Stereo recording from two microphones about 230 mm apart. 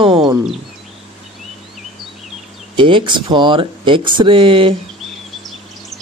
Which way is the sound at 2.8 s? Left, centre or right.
Right.